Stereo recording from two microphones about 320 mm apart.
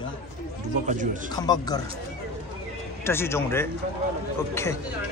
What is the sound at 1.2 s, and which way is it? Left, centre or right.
Speech, centre.